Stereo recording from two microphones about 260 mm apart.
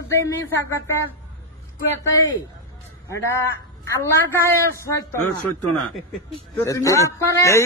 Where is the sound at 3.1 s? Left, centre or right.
Centre.